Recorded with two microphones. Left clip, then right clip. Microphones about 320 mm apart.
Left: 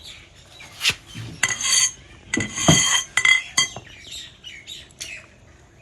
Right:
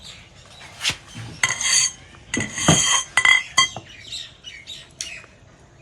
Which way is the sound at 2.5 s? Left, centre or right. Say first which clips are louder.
Left 1 dB; centre.